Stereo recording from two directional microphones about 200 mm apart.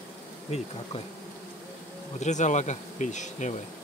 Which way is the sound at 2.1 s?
35° left (ahead or behind).